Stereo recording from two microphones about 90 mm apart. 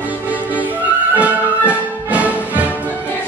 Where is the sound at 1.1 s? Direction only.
15° right (ahead or behind).